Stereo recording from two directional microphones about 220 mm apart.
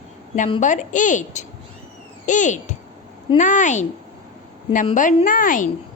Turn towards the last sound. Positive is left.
turn(degrees=40)  # may be behind; listen again after turning